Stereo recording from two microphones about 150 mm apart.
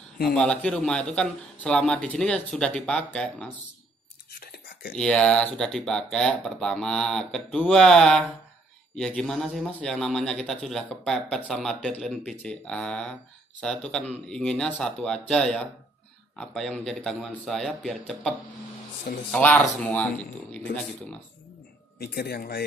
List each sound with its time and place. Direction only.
0.3 s speech: 5° left (ahead or behind)
4.4 s a sound: 75° left (ahead or behind)
4.9 s speech: 5° left (ahead or behind)
19.3 s speech: 10° left (ahead or behind)
22.0 s speech: 90° left